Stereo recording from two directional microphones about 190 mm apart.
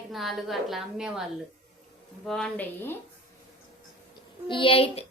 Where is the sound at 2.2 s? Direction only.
5° left (ahead or behind).